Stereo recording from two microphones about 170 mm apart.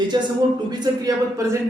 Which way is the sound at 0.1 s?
25° right (ahead or behind).